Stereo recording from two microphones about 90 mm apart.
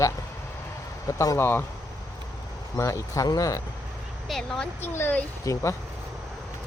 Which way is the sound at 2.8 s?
35° left (ahead or behind).